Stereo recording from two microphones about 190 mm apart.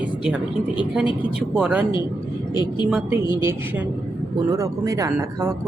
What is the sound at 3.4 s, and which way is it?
Speech, 15° right (ahead or behind).